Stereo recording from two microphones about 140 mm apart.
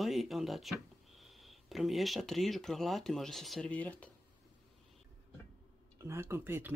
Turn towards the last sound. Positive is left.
turn(degrees=-15)  # may be behind; listen again after turning